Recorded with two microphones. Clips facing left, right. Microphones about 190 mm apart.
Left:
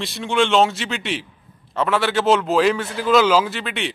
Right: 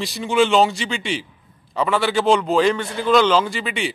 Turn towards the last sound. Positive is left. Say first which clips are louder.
# right 1 dB
turn(degrees=0)  # may be behind; listen again after turning